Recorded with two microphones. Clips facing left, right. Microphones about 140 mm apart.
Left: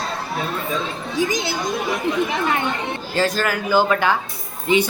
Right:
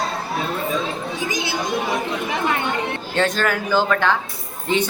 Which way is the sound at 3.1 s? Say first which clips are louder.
Even; 5° left (ahead or behind).